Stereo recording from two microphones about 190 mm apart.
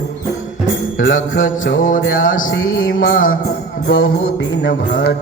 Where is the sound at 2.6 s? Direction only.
90° left.